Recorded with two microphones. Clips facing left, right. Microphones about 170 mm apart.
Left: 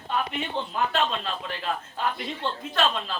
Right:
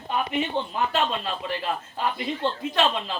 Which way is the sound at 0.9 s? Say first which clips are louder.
Right 1 dB; 5° right (ahead or behind).